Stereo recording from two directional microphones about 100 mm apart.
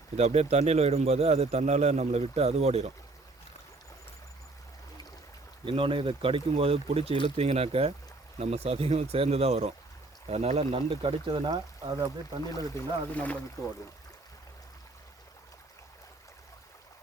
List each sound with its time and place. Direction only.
0.2 s speech: 90° right
5.6 s speech: 60° right (ahead or behind)
7.3 s speech: 90° right; by 11.5 s 60° right (ahead or behind)
11.5 s speech: 45° right (ahead or behind)
12.5 s speech: 35° left (ahead or behind)
13.1 s speech: 15° left (ahead or behind)